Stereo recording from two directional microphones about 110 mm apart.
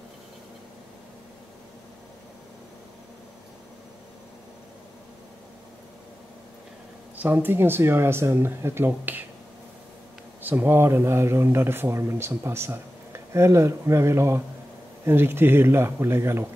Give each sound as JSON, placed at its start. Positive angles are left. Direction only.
{"t": 7.2, "sound": "a man's voice", "side_deg": -15}
{"t": 10.4, "sound": "a man's voice", "side_deg": -20}